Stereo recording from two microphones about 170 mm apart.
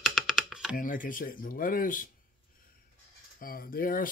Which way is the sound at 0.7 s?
55° left (ahead or behind).